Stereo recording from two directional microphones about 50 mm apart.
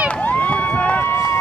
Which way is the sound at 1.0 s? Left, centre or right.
Left.